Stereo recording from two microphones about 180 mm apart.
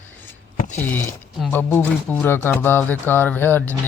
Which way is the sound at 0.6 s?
40° left (ahead or behind).